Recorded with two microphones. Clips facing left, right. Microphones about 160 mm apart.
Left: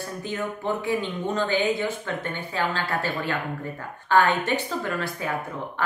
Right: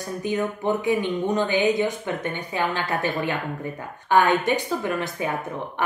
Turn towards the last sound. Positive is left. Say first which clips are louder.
# right 2 dB
turn(degrees=-20)  # may be behind; listen again after turning